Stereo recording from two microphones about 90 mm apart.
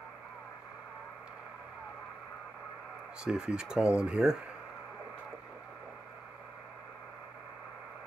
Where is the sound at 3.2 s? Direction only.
10° right (ahead or behind).